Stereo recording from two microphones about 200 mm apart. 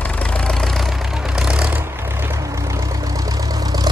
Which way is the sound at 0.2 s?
5° left (ahead or behind).